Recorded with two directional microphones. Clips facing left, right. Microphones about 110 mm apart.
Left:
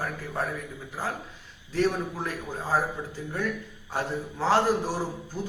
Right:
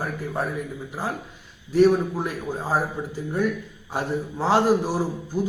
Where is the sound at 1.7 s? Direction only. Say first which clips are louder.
Right 8 dB; 15° right (ahead or behind).